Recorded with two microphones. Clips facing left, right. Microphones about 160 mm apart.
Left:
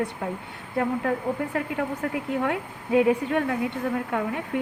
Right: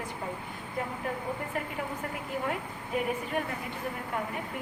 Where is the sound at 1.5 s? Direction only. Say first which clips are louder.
Left 7 dB; 90° left.